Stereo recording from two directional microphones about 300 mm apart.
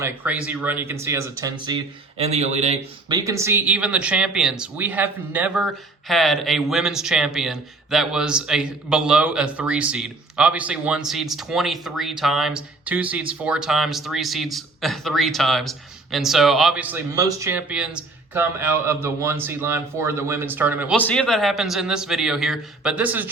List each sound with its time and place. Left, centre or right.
0.0 s speech: centre